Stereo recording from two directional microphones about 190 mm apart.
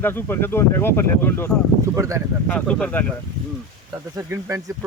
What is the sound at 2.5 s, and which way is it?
Speech, 5° left (ahead or behind).